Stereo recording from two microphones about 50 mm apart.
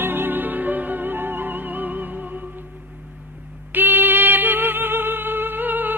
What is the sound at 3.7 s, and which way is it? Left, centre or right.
Music, right.